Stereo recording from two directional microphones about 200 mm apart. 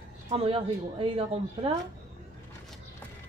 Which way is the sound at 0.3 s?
30° right (ahead or behind).